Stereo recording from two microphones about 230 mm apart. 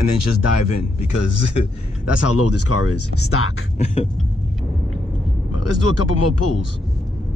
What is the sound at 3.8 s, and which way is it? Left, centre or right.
Vehicle, left.